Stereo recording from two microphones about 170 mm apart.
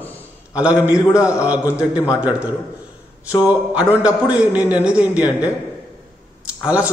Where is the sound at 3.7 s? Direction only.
5° right (ahead or behind).